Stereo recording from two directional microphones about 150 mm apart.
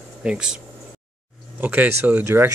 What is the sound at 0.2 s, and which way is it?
Speech, 5° right (ahead or behind).